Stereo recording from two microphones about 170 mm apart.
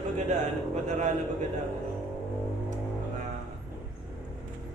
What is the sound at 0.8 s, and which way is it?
Speech, 45° right (ahead or behind).